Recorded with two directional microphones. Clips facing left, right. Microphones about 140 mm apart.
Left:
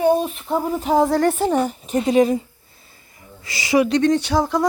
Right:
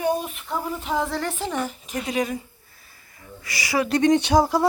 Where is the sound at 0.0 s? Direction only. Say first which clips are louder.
Left 7 dB; 30° left (ahead or behind).